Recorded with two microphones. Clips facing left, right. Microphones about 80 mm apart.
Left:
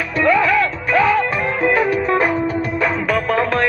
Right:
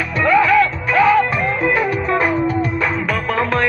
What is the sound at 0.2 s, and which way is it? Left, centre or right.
Music, centre.